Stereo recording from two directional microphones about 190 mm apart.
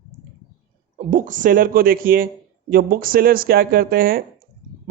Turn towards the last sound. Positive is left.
turn(degrees=-50)  # may be behind; listen again after turning